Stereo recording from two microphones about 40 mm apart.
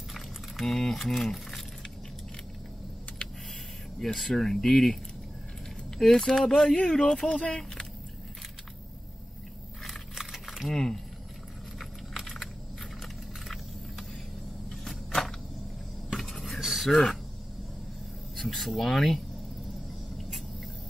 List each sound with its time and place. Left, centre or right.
0.7 s speech: centre
4.0 s speech: centre
5.9 s speech: centre
9.8 s a sound: centre
10.7 s speech: centre
11.8 s a sound: centre
13.0 s vehicle: centre
16.9 s speech: centre
18.3 s speech: centre